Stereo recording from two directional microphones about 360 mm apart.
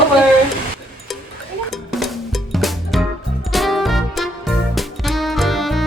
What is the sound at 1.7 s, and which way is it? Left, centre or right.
Drum, centre.